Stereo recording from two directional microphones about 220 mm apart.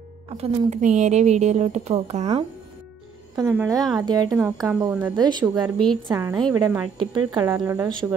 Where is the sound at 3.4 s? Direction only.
15° right (ahead or behind).